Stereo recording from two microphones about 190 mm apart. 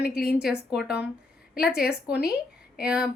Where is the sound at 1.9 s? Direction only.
5° right (ahead or behind).